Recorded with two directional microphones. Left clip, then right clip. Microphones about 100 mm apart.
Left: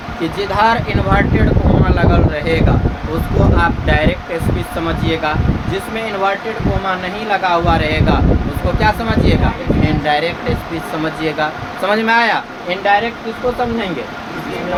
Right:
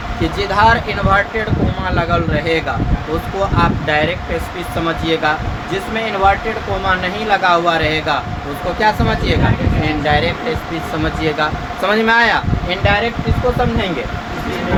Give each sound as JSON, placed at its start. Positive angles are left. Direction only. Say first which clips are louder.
{"t": 0.2, "sound": "speech", "louder": "right 1 dB", "side_deg": 0}
{"t": 3.6, "sound": "speech", "louder": "right 2 dB", "side_deg": 10}
{"t": 6.8, "sound": "speech", "louder": "right 5 dB", "side_deg": -10}
{"t": 8.8, "sound": "speech", "louder": "even", "side_deg": 10}